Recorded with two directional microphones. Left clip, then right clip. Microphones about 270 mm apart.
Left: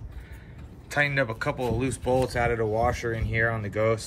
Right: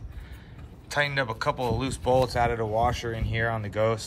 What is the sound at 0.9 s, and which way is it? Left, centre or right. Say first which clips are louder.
Speech: left 1 dB; centre.